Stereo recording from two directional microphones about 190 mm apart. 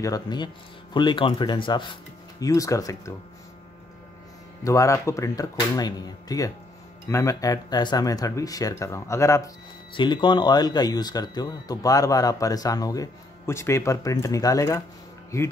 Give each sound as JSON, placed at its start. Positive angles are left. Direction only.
{"t": 0.0, "sound": "speech", "side_deg": 20}
{"t": 4.6, "sound": "speech", "side_deg": 15}